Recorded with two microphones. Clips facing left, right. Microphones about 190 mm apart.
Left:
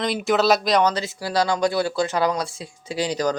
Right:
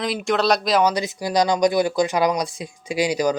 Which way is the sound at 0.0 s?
Centre (ahead or behind).